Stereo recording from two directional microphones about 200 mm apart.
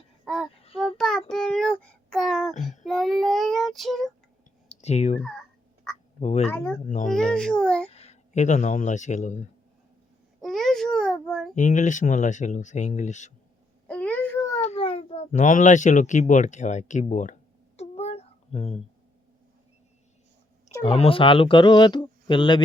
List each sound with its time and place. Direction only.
0.8 s child singing: centre (ahead or behind)
1.3 s music: 5° left (ahead or behind)
2.8 s child singing: centre (ahead or behind)
4.7 s clicking: 35° left (ahead or behind)
6.1 s speech: 35° left (ahead or behind)
6.5 s a child's voice: 5° left (ahead or behind)
7.9 s speech: 30° left (ahead or behind)
10.4 s a sound: centre (ahead or behind)
11.5 s speech: 40° left (ahead or behind)
13.8 s a sound: 5° left (ahead or behind)
14.6 s speech: 30° left (ahead or behind)
17.7 s a sound: 30° left (ahead or behind)
20.9 s speech: 30° left (ahead or behind)